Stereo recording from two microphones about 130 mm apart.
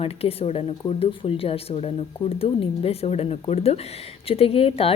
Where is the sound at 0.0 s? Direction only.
50° left (ahead or behind).